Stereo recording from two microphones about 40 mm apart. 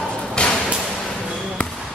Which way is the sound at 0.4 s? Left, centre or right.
Left.